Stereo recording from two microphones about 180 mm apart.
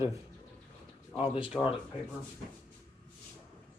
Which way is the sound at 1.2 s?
30° left (ahead or behind).